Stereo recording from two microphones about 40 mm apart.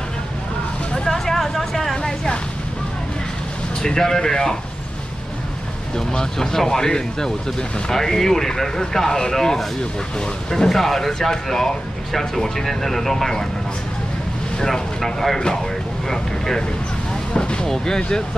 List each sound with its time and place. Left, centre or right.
0.9 s vehicle: centre
3.8 s speech: centre
5.9 s speech: centre
14.6 s speech: centre